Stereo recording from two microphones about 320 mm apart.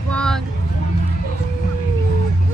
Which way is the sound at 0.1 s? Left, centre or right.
Centre.